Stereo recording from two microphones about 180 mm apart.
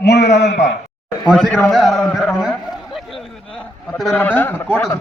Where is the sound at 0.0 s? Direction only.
70° left (ahead or behind).